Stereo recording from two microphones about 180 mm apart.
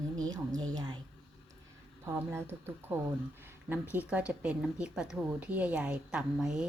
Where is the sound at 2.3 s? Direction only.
15° right (ahead or behind).